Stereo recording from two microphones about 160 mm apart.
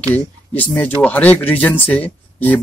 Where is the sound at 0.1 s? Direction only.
10° left (ahead or behind).